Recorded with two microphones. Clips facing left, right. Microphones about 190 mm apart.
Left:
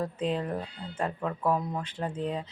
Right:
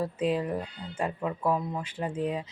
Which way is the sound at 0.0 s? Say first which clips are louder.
Right 2 dB; 10° right (ahead or behind).